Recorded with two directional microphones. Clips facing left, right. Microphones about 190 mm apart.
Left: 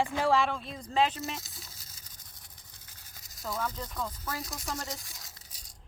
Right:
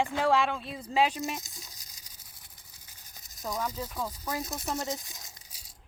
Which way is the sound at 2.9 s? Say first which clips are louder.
Right 1 dB; 15° right (ahead or behind).